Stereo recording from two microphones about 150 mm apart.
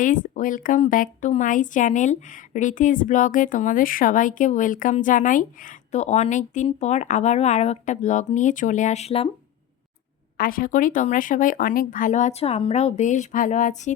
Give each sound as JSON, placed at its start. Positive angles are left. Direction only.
{"t": 0.0, "sound": "speech", "side_deg": 60}
{"t": 10.3, "sound": "speech", "side_deg": 70}